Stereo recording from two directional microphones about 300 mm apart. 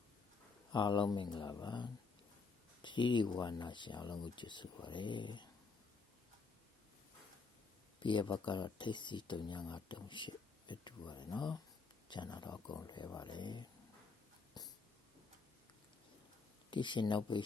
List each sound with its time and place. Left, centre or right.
0.7 s speech: centre
7.9 s speech: centre
14.6 s a sound: centre
16.7 s speech: centre